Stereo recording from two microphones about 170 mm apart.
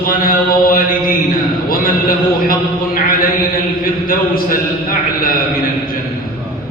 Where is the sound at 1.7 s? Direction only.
60° left (ahead or behind).